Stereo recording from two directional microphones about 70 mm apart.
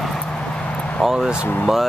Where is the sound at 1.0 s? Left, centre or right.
Centre.